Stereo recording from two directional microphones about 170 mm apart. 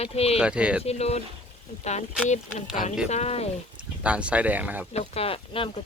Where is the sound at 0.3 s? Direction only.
5° right (ahead or behind).